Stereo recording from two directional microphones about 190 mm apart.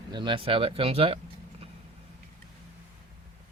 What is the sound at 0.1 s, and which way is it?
Speech, 25° right (ahead or behind).